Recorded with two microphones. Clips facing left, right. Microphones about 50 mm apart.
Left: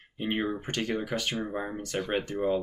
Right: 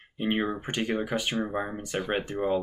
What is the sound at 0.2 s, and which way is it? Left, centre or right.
Speech, centre.